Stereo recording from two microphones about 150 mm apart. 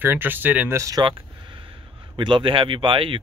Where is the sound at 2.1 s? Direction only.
35° right (ahead or behind).